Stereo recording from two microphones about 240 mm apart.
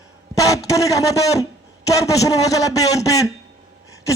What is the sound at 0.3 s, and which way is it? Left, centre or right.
A man's voice, centre.